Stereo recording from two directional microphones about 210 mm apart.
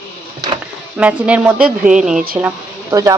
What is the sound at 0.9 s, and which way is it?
Speech, 5° right (ahead or behind).